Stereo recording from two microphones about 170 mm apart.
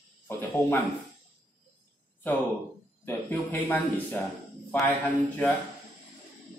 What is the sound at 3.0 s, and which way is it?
Speech, 10° left (ahead or behind).